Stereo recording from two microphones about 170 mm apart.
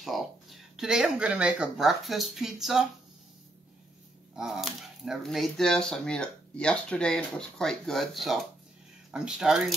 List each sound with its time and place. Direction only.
0.0 s speech: centre (ahead or behind)
4.4 s speech: centre (ahead or behind)